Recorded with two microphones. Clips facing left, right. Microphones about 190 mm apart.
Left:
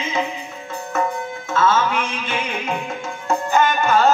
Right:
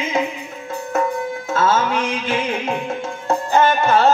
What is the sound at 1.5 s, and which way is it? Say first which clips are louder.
Music: even; 40° right (ahead or behind).